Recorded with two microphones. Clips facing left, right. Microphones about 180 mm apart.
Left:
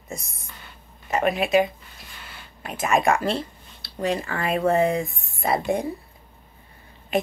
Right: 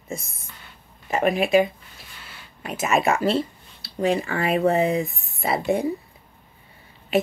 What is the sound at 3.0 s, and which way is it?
Speech, 5° right (ahead or behind).